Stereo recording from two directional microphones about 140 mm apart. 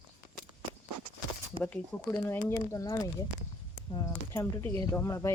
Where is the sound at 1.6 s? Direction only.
10° left (ahead or behind).